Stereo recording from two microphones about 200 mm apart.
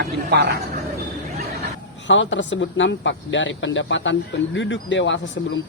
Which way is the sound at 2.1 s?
70° left (ahead or behind).